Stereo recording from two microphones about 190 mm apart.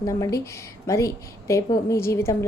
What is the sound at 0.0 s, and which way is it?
A woman's voice, 15° left (ahead or behind).